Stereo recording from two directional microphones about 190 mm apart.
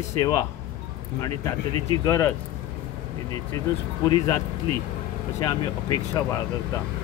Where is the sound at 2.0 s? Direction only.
15° left (ahead or behind).